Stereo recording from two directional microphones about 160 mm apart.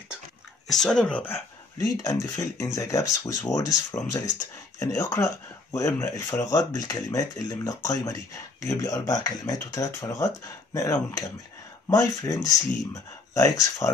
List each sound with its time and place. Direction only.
0.7 s speech: centre (ahead or behind)
2.0 s speech: 20° left (ahead or behind)